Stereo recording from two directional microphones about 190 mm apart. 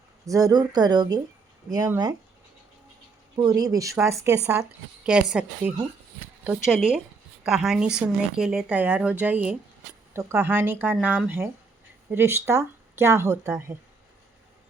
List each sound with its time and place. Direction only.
0.3 s speech: 20° right (ahead or behind)
3.3 s speech: 20° right (ahead or behind)
5.0 s a woman's voice: 5° right (ahead or behind)